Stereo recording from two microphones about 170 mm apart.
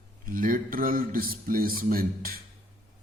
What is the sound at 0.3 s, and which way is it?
Speech, 55° right (ahead or behind).